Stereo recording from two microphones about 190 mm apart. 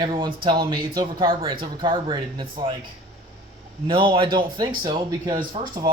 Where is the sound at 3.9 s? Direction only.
25° right (ahead or behind).